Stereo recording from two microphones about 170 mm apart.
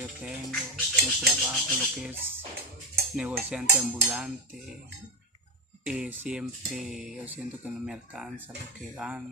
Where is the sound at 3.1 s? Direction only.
5° right (ahead or behind).